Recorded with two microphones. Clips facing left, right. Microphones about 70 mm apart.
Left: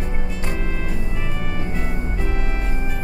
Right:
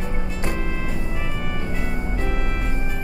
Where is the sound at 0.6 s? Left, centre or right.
Centre.